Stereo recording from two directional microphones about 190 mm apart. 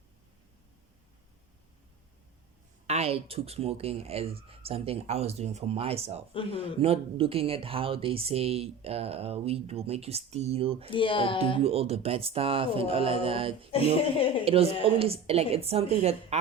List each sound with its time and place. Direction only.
2.8 s speech: 35° right (ahead or behind)
6.3 s speech: 30° left (ahead or behind)
6.7 s speech: 30° right (ahead or behind)
10.9 s speech: 25° left (ahead or behind)
11.6 s speech: 30° right (ahead or behind)